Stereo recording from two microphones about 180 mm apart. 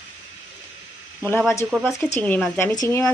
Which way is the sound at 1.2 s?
10° left (ahead or behind).